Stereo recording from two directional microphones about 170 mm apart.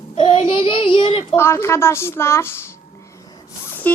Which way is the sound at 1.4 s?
15° left (ahead or behind).